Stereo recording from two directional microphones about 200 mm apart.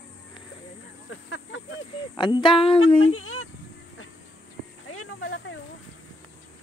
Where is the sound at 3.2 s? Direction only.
90° left.